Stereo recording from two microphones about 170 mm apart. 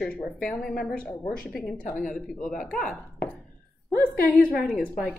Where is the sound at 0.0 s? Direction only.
5° left (ahead or behind).